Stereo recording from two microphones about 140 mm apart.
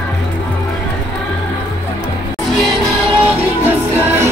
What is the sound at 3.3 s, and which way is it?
Music, 15° right (ahead or behind).